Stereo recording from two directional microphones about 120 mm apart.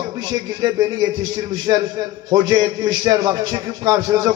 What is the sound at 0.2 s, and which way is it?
A man's voice, 35° right (ahead or behind).